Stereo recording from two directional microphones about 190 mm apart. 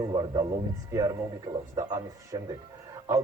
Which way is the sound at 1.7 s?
15° right (ahead or behind).